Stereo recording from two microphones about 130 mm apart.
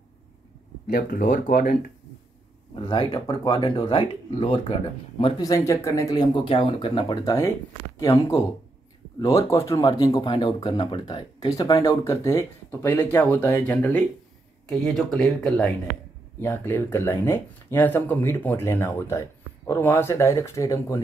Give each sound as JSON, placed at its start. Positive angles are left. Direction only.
{"t": 0.8, "sound": "speech", "side_deg": 90}
{"t": 2.7, "sound": "speech", "side_deg": 40}
{"t": 5.4, "sound": "speech", "side_deg": 25}
{"t": 6.4, "sound": "speech", "side_deg": 40}
{"t": 14.7, "sound": "speech", "side_deg": 0}